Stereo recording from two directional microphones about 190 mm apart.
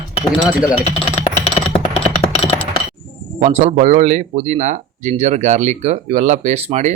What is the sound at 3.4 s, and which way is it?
Speech, 35° right (ahead or behind).